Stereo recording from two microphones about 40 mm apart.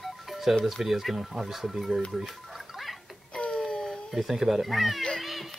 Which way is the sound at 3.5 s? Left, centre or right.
Centre.